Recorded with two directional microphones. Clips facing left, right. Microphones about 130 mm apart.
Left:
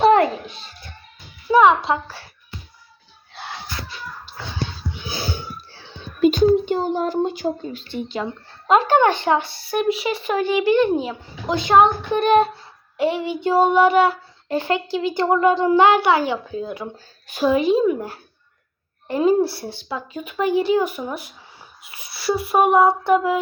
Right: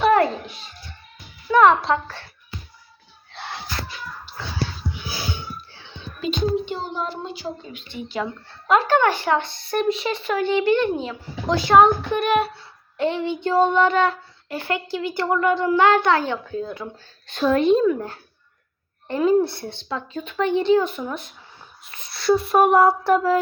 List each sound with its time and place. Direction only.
0.0 s a sound: 20° left (ahead or behind)
1.5 s speech: 5° left (ahead or behind)
5.3 s wheeze: 40° left (ahead or behind)
6.2 s a sound: 45° left (ahead or behind)
8.1 s speech: 20° left (ahead or behind)
9.4 s a child's voice: 5° left (ahead or behind); by 12.5 s 25° left (ahead or behind)
13.0 s a child's voice: 10° left (ahead or behind)
14.4 s a child's voice: 20° left (ahead or behind); by 17.8 s 5° left (ahead or behind)
17.8 s a child's voice: 15° left (ahead or behind)